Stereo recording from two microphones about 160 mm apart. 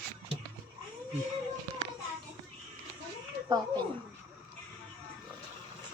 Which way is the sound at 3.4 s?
25° right (ahead or behind).